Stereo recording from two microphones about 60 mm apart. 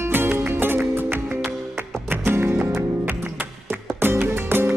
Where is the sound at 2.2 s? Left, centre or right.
Right.